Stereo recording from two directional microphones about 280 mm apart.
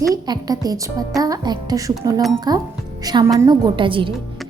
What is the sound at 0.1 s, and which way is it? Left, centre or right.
A woman's voice, centre.